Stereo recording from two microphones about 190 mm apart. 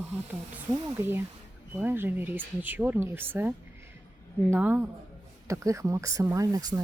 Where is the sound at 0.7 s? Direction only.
15° right (ahead or behind).